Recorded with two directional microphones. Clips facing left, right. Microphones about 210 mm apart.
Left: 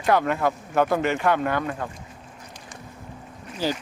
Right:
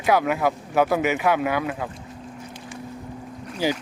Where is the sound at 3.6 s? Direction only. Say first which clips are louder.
Right 2 dB; 10° right (ahead or behind).